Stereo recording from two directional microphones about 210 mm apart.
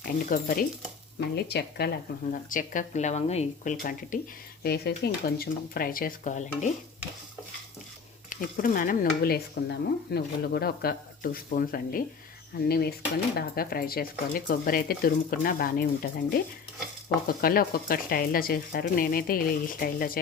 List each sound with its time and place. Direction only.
0.3 s cutlery: 45° left (ahead or behind)
2.3 s speech: 40° left (ahead or behind)
4.6 s cutlery: 50° left (ahead or behind)
8.5 s cutlery: 40° left (ahead or behind)